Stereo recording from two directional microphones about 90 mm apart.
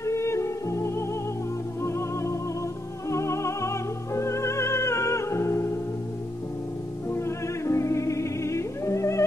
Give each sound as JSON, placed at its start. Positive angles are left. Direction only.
{"t": 0.0, "sound": "music", "side_deg": 35}
{"t": 7.1, "sound": "music", "side_deg": 30}